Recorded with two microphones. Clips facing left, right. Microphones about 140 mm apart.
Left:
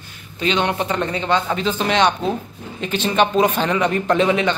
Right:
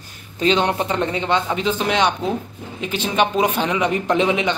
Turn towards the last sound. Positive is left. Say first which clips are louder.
# left 1 dB
turn(degrees=-15)  # may be behind; listen again after turning